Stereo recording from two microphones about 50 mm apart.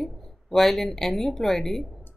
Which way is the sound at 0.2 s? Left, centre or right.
Centre.